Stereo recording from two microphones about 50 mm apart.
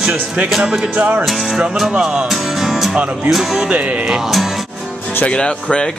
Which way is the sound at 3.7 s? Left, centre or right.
Right.